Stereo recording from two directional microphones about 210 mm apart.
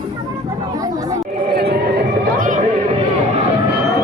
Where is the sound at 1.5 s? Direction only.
50° right (ahead or behind).